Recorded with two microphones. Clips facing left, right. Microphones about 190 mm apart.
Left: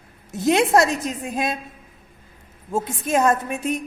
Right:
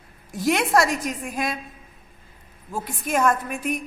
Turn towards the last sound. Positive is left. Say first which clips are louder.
# left 2 dB
turn(degrees=25)  # may be behind; listen again after turning